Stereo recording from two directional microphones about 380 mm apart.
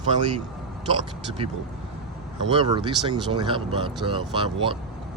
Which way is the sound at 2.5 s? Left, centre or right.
Centre.